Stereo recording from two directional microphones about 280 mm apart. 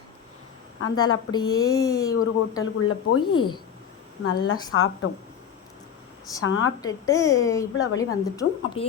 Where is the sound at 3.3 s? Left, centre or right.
Centre.